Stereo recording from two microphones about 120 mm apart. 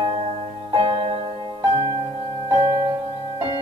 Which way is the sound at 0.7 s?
50° right (ahead or behind).